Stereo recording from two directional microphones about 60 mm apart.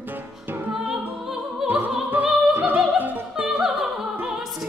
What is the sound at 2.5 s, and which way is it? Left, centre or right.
Opera, right.